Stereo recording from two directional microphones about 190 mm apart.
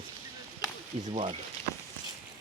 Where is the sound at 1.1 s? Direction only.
35° right (ahead or behind).